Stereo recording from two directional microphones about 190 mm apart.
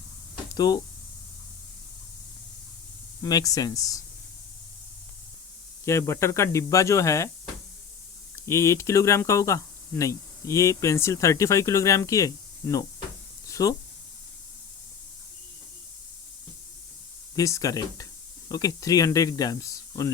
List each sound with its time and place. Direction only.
0.5 s speech: 20° left (ahead or behind)
3.2 s speech: 20° left (ahead or behind)
5.8 s speech: 15° left (ahead or behind)
8.4 s speech: 15° left (ahead or behind)
17.3 s speech: 15° left (ahead or behind)